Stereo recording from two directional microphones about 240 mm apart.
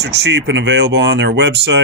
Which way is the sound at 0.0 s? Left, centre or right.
Right.